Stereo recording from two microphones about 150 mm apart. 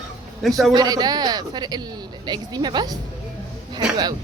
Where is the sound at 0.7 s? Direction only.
25° right (ahead or behind).